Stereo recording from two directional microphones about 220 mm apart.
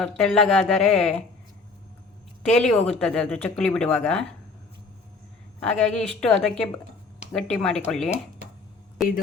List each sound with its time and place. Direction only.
0.0 s speech: centre (ahead or behind)
2.4 s speech: centre (ahead or behind)
5.5 s speech: 5° left (ahead or behind)